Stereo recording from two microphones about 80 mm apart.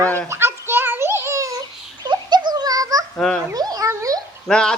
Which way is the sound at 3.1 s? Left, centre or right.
Centre.